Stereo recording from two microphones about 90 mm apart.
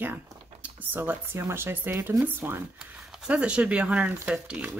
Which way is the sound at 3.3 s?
10° right (ahead or behind).